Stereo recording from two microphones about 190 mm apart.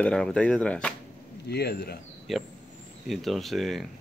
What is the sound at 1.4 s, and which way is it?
Speech, 60° left (ahead or behind).